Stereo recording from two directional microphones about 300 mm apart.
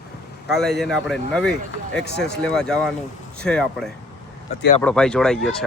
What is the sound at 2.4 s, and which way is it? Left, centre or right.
Speech, centre.